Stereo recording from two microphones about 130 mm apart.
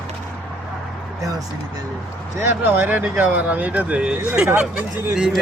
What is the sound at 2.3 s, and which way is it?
Speech, 15° right (ahead or behind).